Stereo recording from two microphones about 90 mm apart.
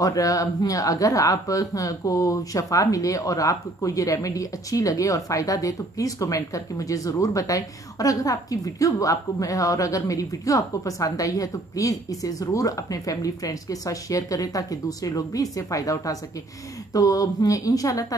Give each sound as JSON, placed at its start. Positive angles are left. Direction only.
{"t": 0.0, "sound": "speech", "side_deg": 40}